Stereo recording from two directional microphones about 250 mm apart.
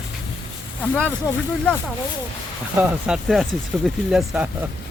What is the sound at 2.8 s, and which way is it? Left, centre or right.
Speech, centre.